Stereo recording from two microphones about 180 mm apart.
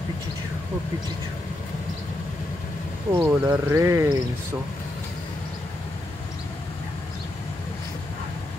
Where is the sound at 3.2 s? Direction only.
15° right (ahead or behind).